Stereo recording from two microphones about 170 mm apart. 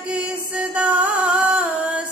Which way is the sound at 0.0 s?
5° right (ahead or behind).